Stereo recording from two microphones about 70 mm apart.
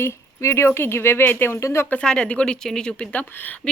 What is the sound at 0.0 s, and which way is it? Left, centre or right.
A woman's voice, left.